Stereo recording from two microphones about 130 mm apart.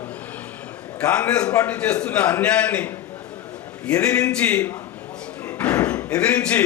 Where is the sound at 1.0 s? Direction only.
10° left (ahead or behind).